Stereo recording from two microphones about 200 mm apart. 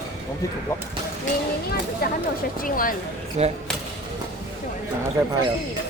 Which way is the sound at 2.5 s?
45° left (ahead or behind).